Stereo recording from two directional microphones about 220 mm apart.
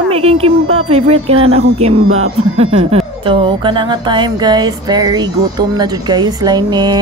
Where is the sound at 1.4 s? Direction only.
75° right (ahead or behind).